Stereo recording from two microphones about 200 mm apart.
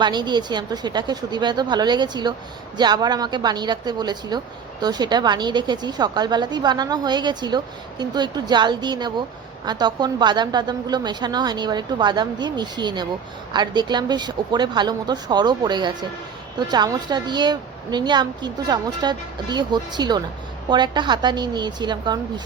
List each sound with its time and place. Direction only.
0.0 s a woman's voice: 20° right (ahead or behind)